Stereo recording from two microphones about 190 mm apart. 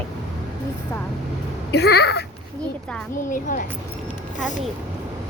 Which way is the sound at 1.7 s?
60° left (ahead or behind).